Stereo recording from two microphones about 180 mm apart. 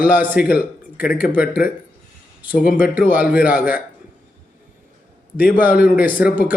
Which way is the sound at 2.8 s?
10° right (ahead or behind).